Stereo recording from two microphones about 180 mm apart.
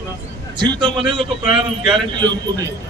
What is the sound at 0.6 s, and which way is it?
A man's voice, 25° right (ahead or behind).